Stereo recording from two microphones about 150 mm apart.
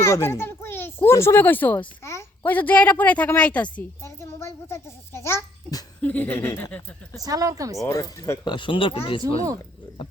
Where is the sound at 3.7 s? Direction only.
15° left (ahead or behind).